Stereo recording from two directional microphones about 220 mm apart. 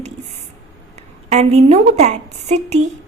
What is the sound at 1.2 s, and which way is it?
A woman's voice, 30° right (ahead or behind).